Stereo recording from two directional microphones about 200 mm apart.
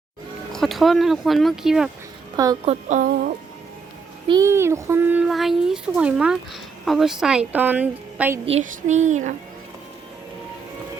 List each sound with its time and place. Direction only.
0.5 s a child's voice: centre (ahead or behind)
2.3 s a woman's voice: 20° right (ahead or behind)
2.6 s a child's voice: 35° right (ahead or behind)
4.3 s a child's voice: 15° right (ahead or behind)
8.4 s a child's voice: 35° right (ahead or behind)